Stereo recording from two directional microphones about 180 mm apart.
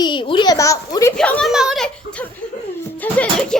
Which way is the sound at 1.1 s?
5° left (ahead or behind).